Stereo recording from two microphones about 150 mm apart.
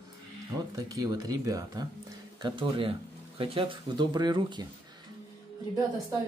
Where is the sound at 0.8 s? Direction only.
25° right (ahead or behind).